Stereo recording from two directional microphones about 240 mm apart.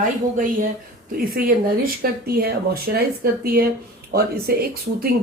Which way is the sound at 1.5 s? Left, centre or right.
Right.